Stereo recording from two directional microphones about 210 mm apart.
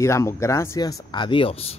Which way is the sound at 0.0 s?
15° left (ahead or behind).